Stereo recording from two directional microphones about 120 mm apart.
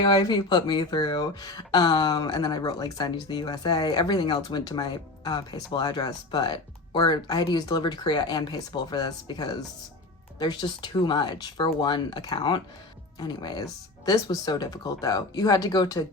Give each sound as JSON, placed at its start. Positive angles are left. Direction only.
{"t": 0.0, "sound": "speech", "side_deg": 40}